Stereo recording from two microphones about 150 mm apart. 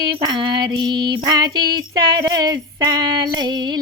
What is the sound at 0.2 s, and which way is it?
Female singing, 30° right (ahead or behind).